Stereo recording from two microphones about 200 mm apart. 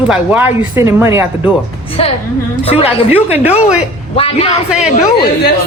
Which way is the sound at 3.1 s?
10° right (ahead or behind).